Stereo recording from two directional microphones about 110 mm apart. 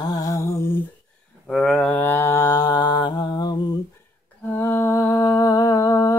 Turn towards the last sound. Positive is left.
turn(degrees=30)  # may be behind; listen again after turning